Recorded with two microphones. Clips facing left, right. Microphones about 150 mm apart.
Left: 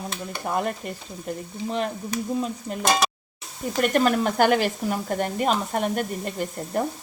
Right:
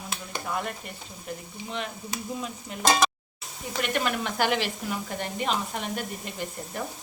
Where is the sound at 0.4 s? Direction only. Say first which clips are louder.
Left 6 dB; 45° left (ahead or behind).